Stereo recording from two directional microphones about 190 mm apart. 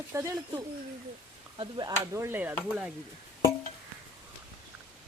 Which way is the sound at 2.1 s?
15° right (ahead or behind).